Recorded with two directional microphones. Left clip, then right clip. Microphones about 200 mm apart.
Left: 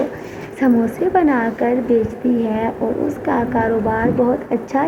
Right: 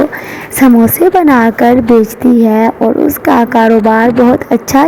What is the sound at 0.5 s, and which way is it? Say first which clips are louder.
A woman's voice: right 10 dB; 55° right (ahead or behind).